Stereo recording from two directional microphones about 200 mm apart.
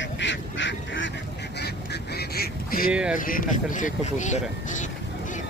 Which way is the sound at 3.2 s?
45° left (ahead or behind).